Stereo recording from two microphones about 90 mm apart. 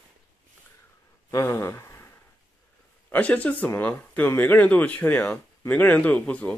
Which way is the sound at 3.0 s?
15° left (ahead or behind).